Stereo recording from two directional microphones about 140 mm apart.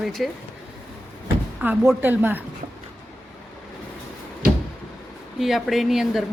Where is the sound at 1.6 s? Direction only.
15° right (ahead or behind).